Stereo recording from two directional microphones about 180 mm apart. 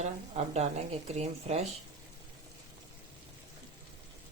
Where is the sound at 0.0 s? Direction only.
40° right (ahead or behind).